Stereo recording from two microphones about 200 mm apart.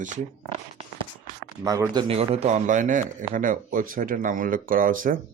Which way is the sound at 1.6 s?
15° right (ahead or behind).